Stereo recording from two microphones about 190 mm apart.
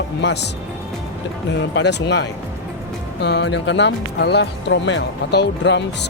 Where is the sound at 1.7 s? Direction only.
65° left (ahead or behind).